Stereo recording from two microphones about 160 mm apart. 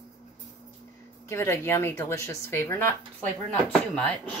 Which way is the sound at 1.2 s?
15° left (ahead or behind).